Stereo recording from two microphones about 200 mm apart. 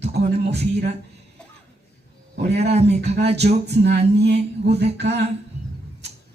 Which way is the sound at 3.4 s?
55° right (ahead or behind).